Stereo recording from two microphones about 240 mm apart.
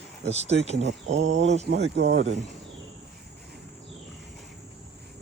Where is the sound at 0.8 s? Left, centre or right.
Right.